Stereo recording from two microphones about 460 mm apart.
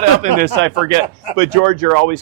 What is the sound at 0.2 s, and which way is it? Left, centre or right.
Speech, centre.